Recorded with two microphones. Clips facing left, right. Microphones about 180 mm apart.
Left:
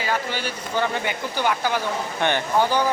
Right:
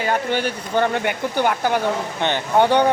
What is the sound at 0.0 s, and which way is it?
Speech, 55° right (ahead or behind).